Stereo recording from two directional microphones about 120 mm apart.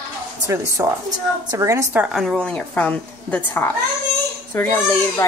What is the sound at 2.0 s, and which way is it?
A woman's voice, 5° right (ahead or behind).